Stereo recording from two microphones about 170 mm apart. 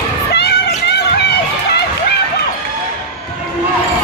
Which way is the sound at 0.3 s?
75° left (ahead or behind).